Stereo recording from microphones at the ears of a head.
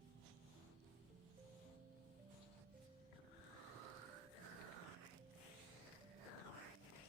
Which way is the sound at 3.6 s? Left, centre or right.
Right.